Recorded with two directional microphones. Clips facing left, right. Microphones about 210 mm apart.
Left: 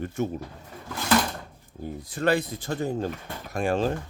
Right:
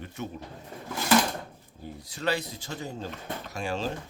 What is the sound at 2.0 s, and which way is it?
Speech, 50° left (ahead or behind).